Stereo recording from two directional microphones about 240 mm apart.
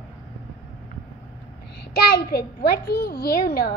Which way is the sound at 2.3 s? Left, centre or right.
Left.